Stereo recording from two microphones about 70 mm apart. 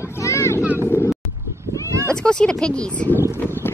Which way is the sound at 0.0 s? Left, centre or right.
Left.